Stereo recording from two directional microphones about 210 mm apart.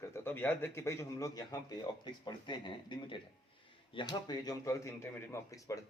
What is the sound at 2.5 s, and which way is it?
Speech, 20° left (ahead or behind).